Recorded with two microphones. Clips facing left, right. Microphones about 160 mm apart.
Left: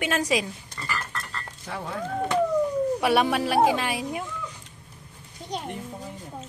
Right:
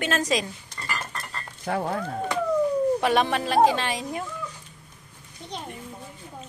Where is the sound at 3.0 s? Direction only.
10° left (ahead or behind).